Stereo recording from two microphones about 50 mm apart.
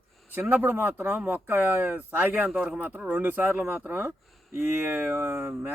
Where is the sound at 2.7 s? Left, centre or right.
Right.